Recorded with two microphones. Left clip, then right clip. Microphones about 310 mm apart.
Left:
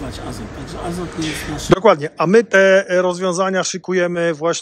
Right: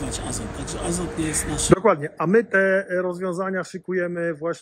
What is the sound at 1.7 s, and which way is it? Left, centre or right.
A man's voice, centre.